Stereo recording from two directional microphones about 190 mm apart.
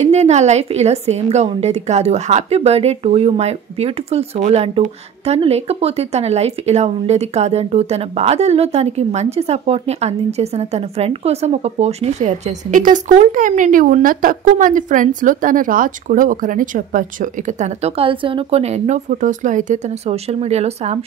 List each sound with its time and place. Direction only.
0.0 s speech: 35° right (ahead or behind)